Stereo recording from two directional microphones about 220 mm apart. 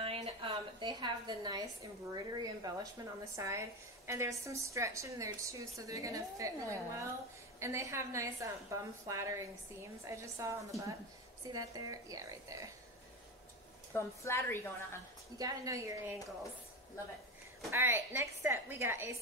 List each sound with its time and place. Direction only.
0.0 s a woman's voice: 25° right (ahead or behind)
13.9 s a woman's voice: 10° left (ahead or behind)
15.3 s a woman's voice: 15° right (ahead or behind)
17.6 s a woman's voice: 10° right (ahead or behind)